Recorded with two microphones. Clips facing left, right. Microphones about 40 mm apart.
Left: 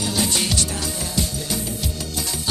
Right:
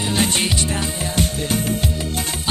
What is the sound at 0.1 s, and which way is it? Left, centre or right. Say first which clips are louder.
Music: right 4 dB; right.